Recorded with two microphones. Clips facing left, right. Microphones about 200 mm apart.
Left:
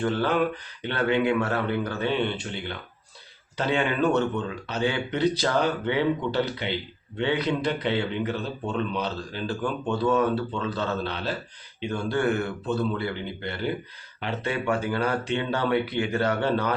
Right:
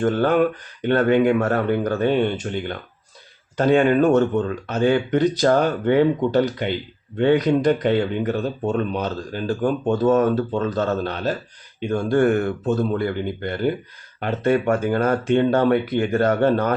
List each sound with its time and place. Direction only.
0.0 s speech: 50° right (ahead or behind)